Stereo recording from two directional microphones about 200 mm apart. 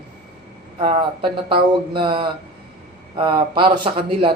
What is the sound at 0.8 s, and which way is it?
Speech, 25° right (ahead or behind).